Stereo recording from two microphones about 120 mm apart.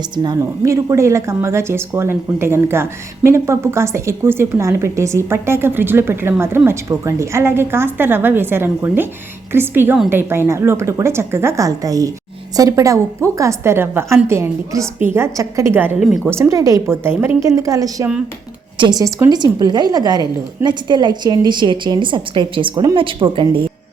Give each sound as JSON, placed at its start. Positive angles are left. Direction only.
{"t": 0.2, "sound": "a woman's voice", "side_deg": -30}
{"t": 16.0, "sound": "speech", "side_deg": 0}
{"t": 16.2, "sound": "a woman's voice", "side_deg": -20}
{"t": 22.7, "sound": "a woman's voice", "side_deg": -30}
{"t": 23.0, "sound": "speech", "side_deg": -45}